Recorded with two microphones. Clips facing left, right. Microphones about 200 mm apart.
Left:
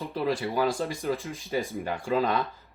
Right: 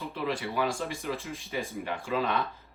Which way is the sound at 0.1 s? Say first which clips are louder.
Left 5 dB; 40° left (ahead or behind).